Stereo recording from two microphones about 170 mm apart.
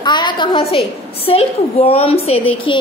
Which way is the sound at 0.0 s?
25° left (ahead or behind).